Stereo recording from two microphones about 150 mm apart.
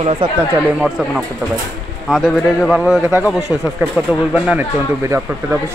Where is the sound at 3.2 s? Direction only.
20° left (ahead or behind).